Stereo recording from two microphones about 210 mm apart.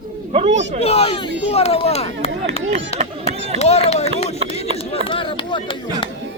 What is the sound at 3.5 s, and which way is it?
Speech, 30° left (ahead or behind).